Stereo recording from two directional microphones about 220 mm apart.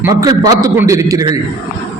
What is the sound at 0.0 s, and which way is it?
A man's voice, 15° right (ahead or behind).